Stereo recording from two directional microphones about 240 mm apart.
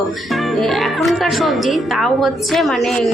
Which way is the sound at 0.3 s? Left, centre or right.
Centre.